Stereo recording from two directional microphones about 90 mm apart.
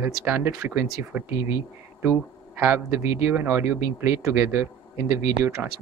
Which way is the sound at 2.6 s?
25° right (ahead or behind).